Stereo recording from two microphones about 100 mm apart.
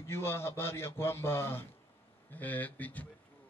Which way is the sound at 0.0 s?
25° left (ahead or behind).